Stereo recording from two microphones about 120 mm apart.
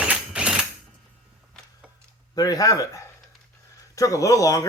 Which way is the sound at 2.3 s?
30° left (ahead or behind).